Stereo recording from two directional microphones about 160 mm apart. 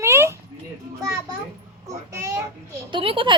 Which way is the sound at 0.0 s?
15° right (ahead or behind).